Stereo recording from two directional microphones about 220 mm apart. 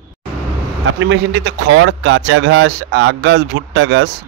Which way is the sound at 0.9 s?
60° right (ahead or behind).